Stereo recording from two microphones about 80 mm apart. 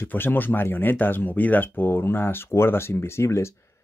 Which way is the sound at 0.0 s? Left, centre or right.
Left.